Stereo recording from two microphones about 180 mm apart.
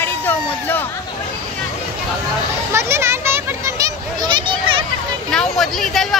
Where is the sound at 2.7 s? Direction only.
15° right (ahead or behind).